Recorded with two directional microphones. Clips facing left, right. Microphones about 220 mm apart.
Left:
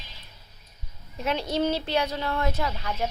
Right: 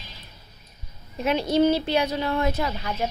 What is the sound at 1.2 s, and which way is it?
Speech, 10° right (ahead or behind).